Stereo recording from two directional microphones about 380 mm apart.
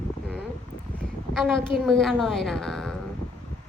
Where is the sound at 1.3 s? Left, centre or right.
Centre.